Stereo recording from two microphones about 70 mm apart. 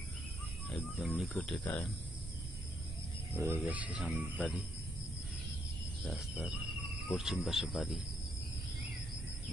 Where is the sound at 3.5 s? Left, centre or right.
Right.